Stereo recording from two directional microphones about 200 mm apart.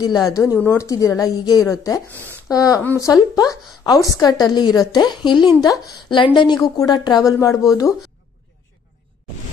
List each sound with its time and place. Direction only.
0.3 s a woman's voice: 15° left (ahead or behind)